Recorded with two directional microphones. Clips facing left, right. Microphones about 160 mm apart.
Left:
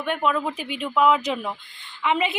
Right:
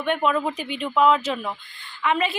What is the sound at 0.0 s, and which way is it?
A woman's voice, 5° left (ahead or behind).